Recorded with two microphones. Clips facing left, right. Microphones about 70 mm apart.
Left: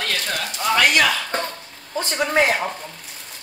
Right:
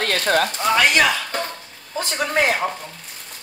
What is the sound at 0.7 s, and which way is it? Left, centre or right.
Speech, centre.